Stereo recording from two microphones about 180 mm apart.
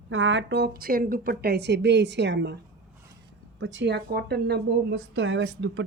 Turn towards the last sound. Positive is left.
turn(degrees=-80)